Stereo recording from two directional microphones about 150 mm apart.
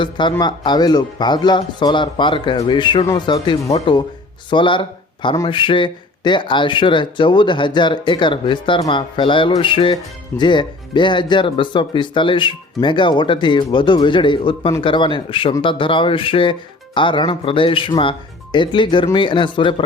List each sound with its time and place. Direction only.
0.0 s speech: 30° left (ahead or behind)